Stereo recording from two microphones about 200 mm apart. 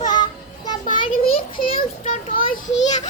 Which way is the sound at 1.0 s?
25° left (ahead or behind).